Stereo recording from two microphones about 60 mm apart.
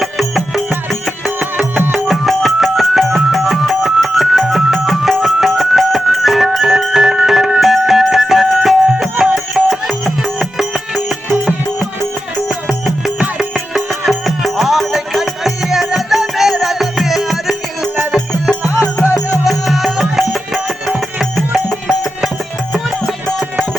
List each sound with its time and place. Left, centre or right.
0.0 s music: centre
2.0 s music: centre
12.5 s music: centre